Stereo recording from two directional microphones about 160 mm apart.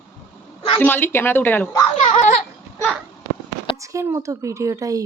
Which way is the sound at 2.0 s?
50° left (ahead or behind).